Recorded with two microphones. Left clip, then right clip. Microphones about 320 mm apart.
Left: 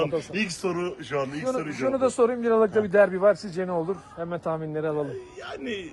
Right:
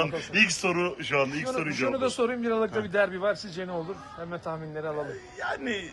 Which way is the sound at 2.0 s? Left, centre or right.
Left.